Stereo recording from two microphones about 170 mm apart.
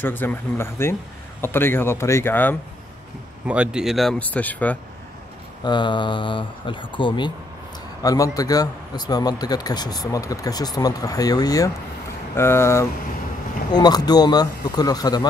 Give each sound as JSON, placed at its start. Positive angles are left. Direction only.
{"t": 0.0, "sound": "speech", "side_deg": 10}
{"t": 3.4, "sound": "speech", "side_deg": -5}
{"t": 5.6, "sound": "speech", "side_deg": 25}